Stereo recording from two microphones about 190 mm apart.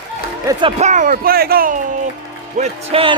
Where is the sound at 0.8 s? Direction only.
40° right (ahead or behind).